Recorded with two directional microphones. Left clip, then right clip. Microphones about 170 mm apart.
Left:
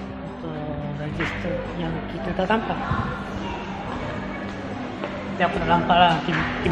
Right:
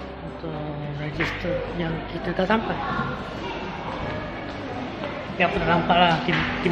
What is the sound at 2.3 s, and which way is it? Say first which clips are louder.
Speech: even; 10° right (ahead or behind).